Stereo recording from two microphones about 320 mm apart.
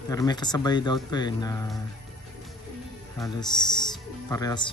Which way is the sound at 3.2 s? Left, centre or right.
Centre.